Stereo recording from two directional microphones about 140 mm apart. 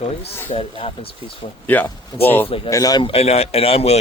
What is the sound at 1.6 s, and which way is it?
Speech, 10° left (ahead or behind).